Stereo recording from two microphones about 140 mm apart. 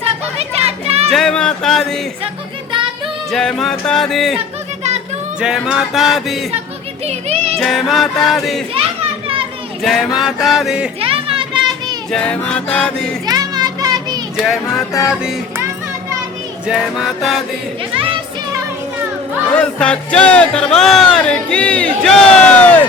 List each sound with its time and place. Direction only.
0.0 s children playing: 45° right (ahead or behind)
1.1 s music: 5° left (ahead or behind)
3.3 s music: 5° left (ahead or behind)
5.4 s music: 5° right (ahead or behind)
7.0 s speech: 50° right (ahead or behind)
7.6 s music: centre (ahead or behind)
9.8 s music: centre (ahead or behind)
11.0 s children playing: 40° right (ahead or behind)
12.1 s speech: 5° left (ahead or behind)
13.2 s children playing: 30° right (ahead or behind)
14.4 s music: centre (ahead or behind)
16.6 s music: 5° right (ahead or behind)
17.9 s music: 40° right (ahead or behind)
19.5 s speech: 5° left (ahead or behind)